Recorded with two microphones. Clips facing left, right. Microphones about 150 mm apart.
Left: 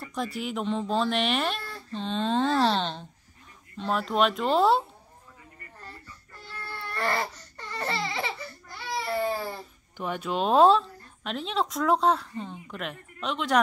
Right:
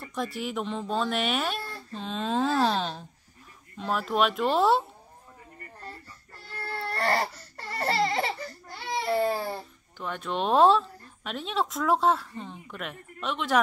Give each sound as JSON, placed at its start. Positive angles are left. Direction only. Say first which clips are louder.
{"t": 0.1, "sound": "speech", "louder": "even", "side_deg": 0}
{"t": 6.6, "sound": "baby cry", "louder": "right 2 dB", "side_deg": -40}
{"t": 7.8, "sound": "a sound", "louder": "right 5 dB", "side_deg": -35}
{"t": 9.9, "sound": "speech", "louder": "left 2 dB", "side_deg": 10}